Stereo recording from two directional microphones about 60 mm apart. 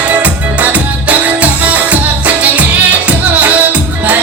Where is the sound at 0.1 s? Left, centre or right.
Right.